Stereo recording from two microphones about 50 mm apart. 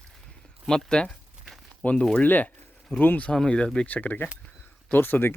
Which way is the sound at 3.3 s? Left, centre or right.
Centre.